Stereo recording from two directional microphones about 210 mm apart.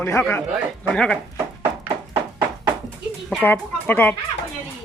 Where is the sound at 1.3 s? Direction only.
10° right (ahead or behind).